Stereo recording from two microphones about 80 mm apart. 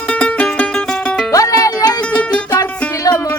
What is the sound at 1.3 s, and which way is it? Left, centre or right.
Music, left.